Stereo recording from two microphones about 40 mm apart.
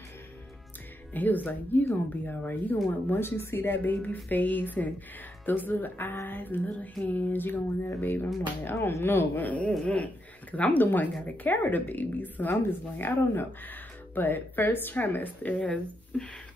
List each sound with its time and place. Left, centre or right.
1.1 s speech: left
3.2 s speech: left
3.7 s speech: left
5.4 s speech: left
9.4 s a man's voice: left
16.1 s a sound: left